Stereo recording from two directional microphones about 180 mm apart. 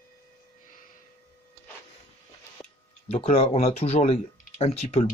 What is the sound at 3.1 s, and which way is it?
Speech, 35° left (ahead or behind).